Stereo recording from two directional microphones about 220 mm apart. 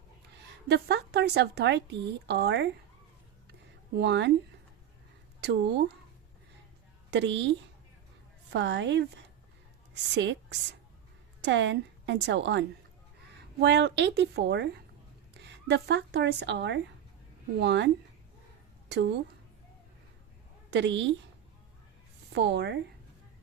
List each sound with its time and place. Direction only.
0.7 s speech: 50° right (ahead or behind)
4.0 s speech: 50° right (ahead or behind)
5.4 s speech: 50° right (ahead or behind)
7.1 s a woman's voice: 55° right (ahead or behind)
8.5 s speech: 55° right (ahead or behind)
10.2 s a woman's voice: 55° right (ahead or behind)
20.7 s a woman's voice: 55° right (ahead or behind)
22.4 s speech: 50° right (ahead or behind)